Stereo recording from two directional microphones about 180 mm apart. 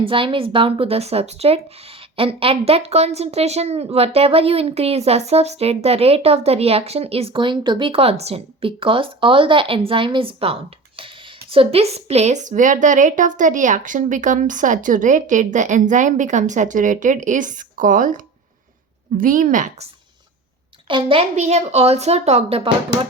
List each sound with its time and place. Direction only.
0.0 s a woman's voice: 30° right (ahead or behind)
20.8 s speech: 30° right (ahead or behind)